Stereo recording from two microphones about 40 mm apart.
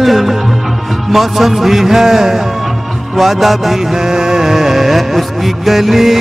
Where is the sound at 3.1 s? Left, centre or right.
Centre.